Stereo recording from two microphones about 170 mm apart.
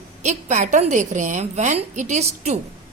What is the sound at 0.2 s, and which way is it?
A woman's voice, 45° right (ahead or behind).